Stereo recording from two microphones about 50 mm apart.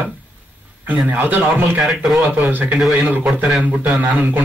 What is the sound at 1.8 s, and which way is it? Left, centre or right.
Speech, centre.